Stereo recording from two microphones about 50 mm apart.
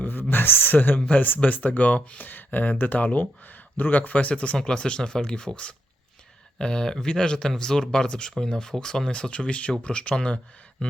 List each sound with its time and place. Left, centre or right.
0.0 s speech: left
0.9 s speech: left